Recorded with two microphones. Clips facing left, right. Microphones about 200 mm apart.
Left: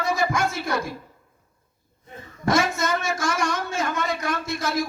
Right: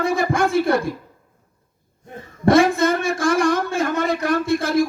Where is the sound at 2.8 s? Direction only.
55° right (ahead or behind).